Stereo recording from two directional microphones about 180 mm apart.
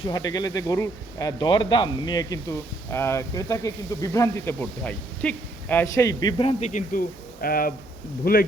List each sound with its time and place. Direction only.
0.0 s speech: 20° left (ahead or behind)
6.7 s speech: 45° left (ahead or behind)